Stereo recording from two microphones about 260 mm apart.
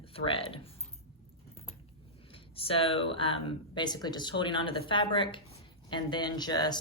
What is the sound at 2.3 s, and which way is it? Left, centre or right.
Speech, left.